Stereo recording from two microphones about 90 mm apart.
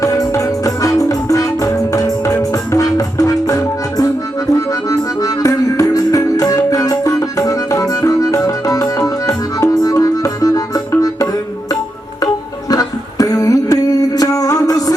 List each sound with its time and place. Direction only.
0.0 s music: 40° left (ahead or behind)
4.5 s accordion: 40° left (ahead or behind)
12.2 s music: 40° left (ahead or behind)